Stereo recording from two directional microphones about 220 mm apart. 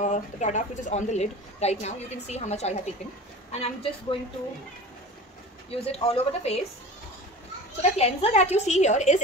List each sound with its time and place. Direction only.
0.0 s a woman's voice: 35° left (ahead or behind)
5.7 s a woman's voice: 25° left (ahead or behind)
7.8 s a woman's voice: 30° left (ahead or behind)